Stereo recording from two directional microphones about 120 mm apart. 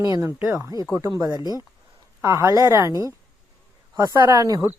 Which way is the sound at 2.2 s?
25° right (ahead or behind).